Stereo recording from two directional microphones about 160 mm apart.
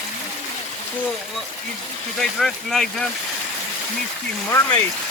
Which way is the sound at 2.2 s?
5° left (ahead or behind).